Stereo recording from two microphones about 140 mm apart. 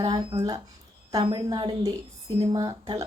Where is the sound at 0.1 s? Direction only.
30° right (ahead or behind).